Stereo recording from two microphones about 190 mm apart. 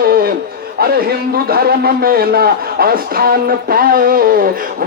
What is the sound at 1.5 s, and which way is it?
Speech, 55° right (ahead or behind).